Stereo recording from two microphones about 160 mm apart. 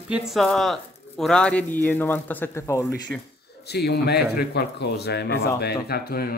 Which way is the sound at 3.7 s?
90° left.